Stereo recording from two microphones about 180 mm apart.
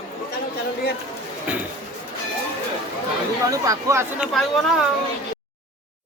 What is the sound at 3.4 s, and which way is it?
Speech, 20° right (ahead or behind).